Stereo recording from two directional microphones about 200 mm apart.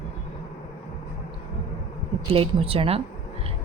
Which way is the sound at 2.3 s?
30° right (ahead or behind).